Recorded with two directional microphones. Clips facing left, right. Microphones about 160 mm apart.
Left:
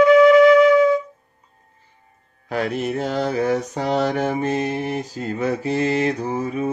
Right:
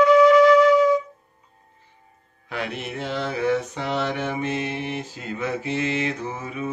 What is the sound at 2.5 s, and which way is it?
Mantra, 40° left (ahead or behind).